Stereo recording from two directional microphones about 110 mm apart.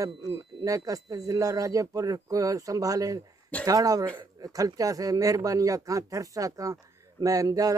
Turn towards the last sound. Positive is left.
turn(degrees=-30)  # may be behind; listen again after turning